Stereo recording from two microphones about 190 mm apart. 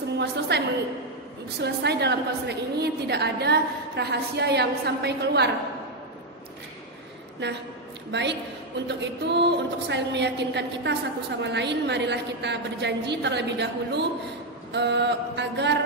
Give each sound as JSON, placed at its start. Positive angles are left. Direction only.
{"t": 0.2, "sound": "a woman's voice", "side_deg": -60}
{"t": 7.4, "sound": "a woman's voice", "side_deg": -65}